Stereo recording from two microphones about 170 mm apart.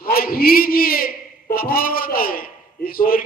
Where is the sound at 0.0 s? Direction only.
60° left (ahead or behind).